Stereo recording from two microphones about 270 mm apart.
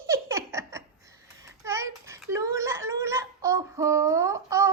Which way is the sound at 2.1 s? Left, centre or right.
Centre.